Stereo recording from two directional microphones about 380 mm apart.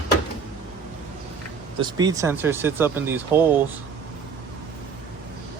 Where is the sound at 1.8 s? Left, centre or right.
Centre.